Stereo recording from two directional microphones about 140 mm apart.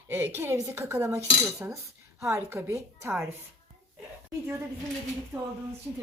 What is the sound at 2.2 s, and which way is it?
Speech, 20° right (ahead or behind).